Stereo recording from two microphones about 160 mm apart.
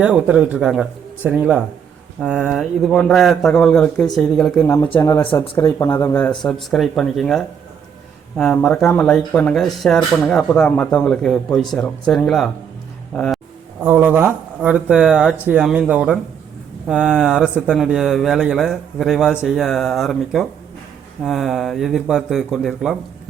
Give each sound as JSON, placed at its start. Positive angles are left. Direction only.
{"t": 0.0, "sound": "speech", "side_deg": -10}
{"t": 4.9, "sound": "speech", "side_deg": 20}
{"t": 6.4, "sound": "speech", "side_deg": 0}
{"t": 13.8, "sound": "speech", "side_deg": -10}